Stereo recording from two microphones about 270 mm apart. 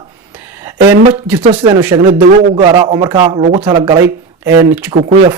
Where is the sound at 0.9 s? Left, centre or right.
Centre.